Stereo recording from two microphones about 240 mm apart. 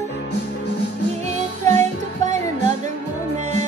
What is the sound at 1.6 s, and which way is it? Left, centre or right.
Music, right.